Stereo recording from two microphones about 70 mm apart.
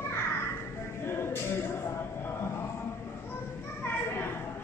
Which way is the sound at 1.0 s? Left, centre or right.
Left.